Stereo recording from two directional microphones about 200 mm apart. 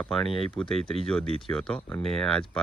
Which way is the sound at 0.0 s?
Centre (ahead or behind).